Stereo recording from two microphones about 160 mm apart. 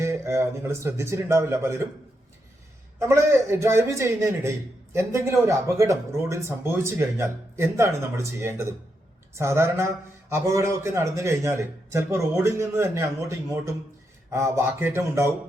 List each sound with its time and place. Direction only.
0.0 s a man's voice: 15° right (ahead or behind)
3.0 s a man's voice: 15° right (ahead or behind)